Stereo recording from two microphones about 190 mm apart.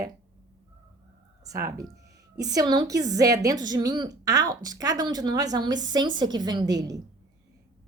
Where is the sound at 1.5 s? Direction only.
15° right (ahead or behind).